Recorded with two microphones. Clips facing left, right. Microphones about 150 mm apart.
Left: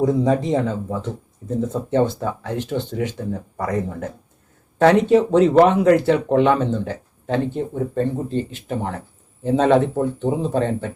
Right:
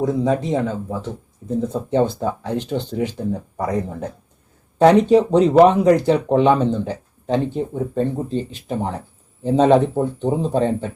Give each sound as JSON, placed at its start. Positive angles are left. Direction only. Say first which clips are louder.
{"t": 0.0, "sound": "speech", "louder": "left 1 dB", "side_deg": 0}
{"t": 1.7, "sound": "speech", "louder": "even", "side_deg": -15}